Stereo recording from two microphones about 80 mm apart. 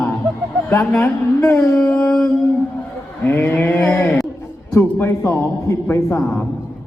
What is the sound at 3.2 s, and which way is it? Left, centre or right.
A man's voice, left.